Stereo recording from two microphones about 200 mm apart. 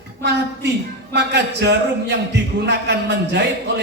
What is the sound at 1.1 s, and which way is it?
A man's voice, 60° right (ahead or behind).